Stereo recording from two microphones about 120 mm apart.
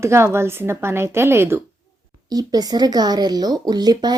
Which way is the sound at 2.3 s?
35° right (ahead or behind).